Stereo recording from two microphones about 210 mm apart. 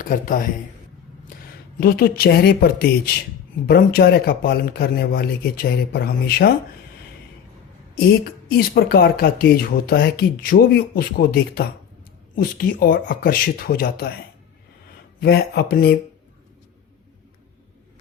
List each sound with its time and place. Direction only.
0.0 s a man's voice: 40° left (ahead or behind)
1.8 s speech: 45° left (ahead or behind)
7.9 s speech: 50° left (ahead or behind)
15.2 s speech: 50° left (ahead or behind)